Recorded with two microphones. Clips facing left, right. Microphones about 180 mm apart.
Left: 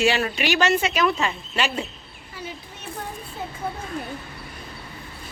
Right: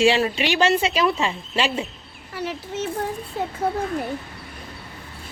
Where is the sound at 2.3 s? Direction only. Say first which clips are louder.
Right 9 dB; 75° right (ahead or behind).